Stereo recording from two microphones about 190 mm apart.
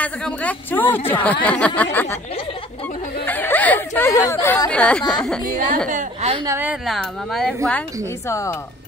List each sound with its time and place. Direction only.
0.0 s speech: 5° left (ahead or behind)
3.3 s speech: 10° left (ahead or behind)
5.9 s a woman's voice: 40° right (ahead or behind)
6.4 s a woman's voice: 10° right (ahead or behind); by 7.8 s 5° left (ahead or behind)
8.3 s speech: 15° left (ahead or behind)